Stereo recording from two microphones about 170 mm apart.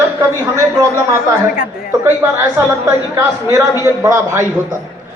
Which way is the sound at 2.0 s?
15° right (ahead or behind).